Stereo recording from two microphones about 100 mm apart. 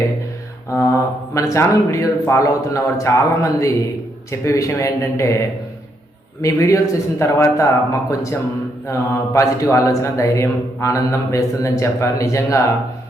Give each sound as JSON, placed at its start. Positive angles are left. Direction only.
{"t": 0.7, "sound": "a man's voice", "side_deg": 30}
{"t": 6.4, "sound": "a man's voice", "side_deg": 35}